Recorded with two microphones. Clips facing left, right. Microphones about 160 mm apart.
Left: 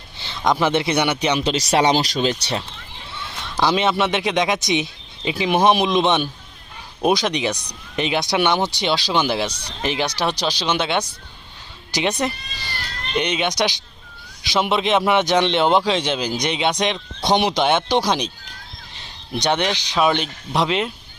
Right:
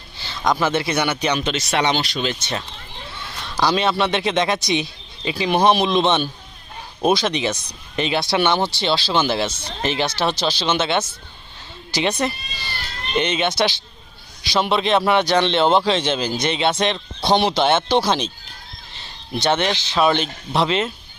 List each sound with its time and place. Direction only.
0.2 s speech: 25° left (ahead or behind)
1.5 s speech: 35° left (ahead or behind)
3.2 s a man's voice: 20° left (ahead or behind)
12.2 s speech: 10° left (ahead or behind)
19.4 s speech: 15° left (ahead or behind)